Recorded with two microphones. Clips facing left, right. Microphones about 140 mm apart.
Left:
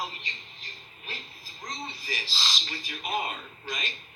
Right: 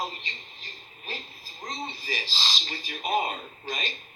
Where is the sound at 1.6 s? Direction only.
25° right (ahead or behind).